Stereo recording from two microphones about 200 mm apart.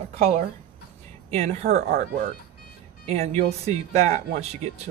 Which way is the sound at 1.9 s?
50° right (ahead or behind).